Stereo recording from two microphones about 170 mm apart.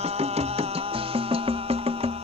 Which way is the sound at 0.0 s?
35° right (ahead or behind).